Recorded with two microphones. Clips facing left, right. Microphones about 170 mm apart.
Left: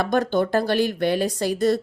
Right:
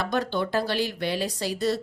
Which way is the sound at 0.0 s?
45° left (ahead or behind).